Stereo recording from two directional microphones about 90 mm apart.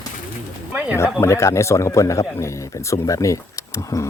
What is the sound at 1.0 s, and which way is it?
Speech, 30° left (ahead or behind).